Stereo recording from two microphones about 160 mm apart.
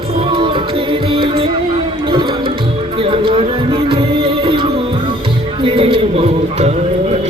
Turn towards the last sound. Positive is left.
turn(degrees=-40)  # may be behind; listen again after turning